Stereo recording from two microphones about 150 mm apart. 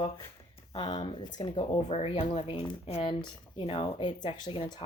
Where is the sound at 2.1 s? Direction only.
30° left (ahead or behind).